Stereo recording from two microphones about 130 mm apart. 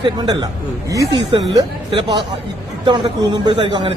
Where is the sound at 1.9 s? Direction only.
40° right (ahead or behind).